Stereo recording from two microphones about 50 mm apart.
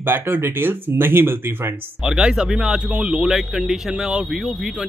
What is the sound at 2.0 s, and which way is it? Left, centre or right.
Speech, centre.